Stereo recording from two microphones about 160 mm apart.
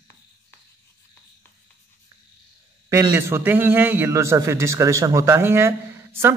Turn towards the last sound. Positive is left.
turn(degrees=-15)  # may be behind; listen again after turning